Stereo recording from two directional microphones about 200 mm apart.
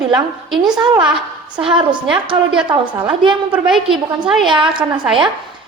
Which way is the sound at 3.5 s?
5° right (ahead or behind).